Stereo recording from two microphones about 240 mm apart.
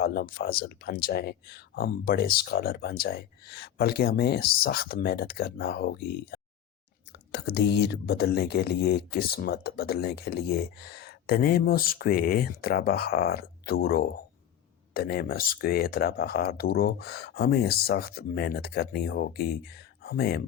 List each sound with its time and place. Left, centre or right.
0.0 s speech: left